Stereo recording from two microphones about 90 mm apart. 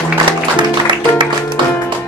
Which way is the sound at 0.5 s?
60° right (ahead or behind).